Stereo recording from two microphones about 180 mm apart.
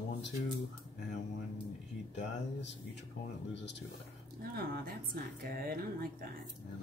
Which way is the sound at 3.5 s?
80° left.